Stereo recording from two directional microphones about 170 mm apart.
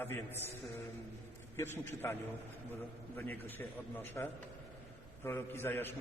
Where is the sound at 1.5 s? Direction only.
15° left (ahead or behind).